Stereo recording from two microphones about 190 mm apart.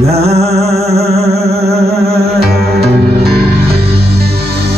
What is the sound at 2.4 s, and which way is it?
Music, 55° right (ahead or behind).